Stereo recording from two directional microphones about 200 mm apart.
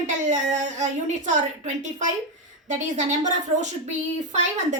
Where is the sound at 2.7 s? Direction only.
35° right (ahead or behind).